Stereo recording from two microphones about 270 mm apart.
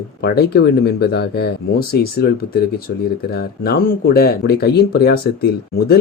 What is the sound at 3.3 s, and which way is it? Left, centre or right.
Speech, left.